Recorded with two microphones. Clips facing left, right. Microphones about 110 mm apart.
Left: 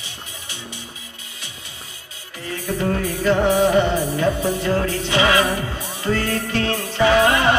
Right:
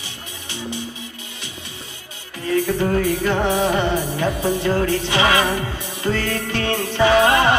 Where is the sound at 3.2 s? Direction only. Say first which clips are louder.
Left 2 dB; 20° right (ahead or behind).